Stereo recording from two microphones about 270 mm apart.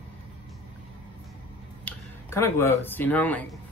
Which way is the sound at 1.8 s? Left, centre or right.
Centre.